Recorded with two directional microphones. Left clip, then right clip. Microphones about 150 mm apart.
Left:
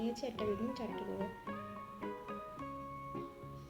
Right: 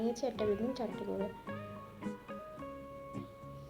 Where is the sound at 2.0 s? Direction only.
Centre (ahead or behind).